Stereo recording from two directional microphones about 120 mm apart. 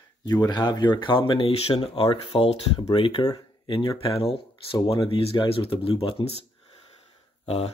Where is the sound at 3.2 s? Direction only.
45° left (ahead or behind).